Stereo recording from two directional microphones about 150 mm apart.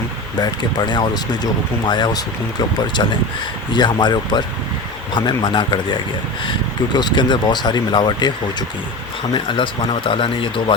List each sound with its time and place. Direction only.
0.3 s speech: 30° left (ahead or behind)
9.3 s speech: 35° left (ahead or behind)